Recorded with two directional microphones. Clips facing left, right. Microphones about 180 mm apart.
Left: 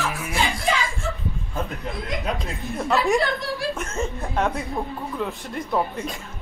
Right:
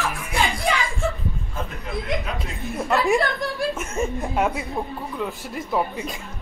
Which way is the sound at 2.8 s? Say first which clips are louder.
Right 1 dB; centre (ahead or behind).